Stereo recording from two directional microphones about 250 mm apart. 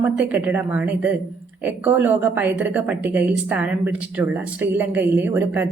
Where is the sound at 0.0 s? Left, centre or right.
Centre.